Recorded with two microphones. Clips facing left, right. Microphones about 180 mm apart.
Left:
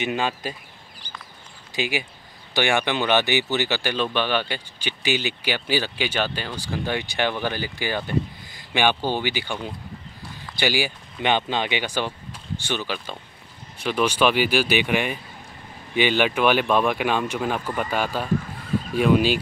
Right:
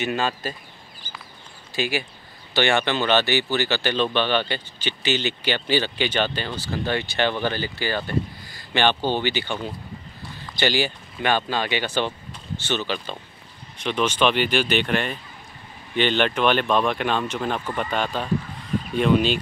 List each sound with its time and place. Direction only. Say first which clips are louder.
0.0 s speech: even; 15° left (ahead or behind)
1.8 s speech: right 1 dB; 15° left (ahead or behind)